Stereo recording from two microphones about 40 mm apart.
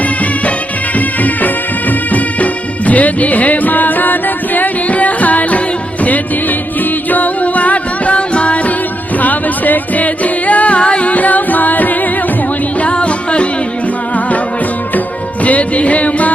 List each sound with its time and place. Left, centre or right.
0.9 s music: left
9.1 s music: left
12.8 s music: left
15.4 s music: left